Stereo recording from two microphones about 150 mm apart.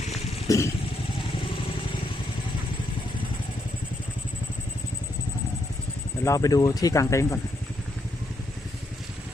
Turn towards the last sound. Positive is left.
turn(degrees=20)  # may be behind; listen again after turning